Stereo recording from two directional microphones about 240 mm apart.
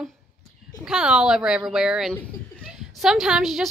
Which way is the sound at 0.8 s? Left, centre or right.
Centre.